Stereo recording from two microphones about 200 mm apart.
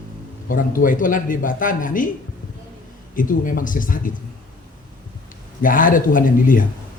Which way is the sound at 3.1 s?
40° left (ahead or behind).